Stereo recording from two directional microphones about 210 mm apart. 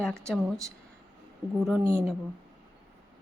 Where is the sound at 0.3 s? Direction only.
Centre (ahead or behind).